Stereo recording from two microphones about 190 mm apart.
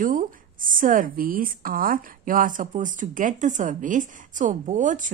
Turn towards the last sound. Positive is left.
turn(degrees=-40)  # may be behind; listen again after turning